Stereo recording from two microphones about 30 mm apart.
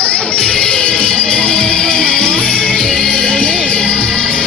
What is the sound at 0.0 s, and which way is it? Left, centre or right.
Music, left.